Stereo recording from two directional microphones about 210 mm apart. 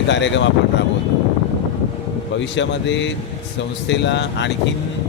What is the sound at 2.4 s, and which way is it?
Speech, 60° left (ahead or behind).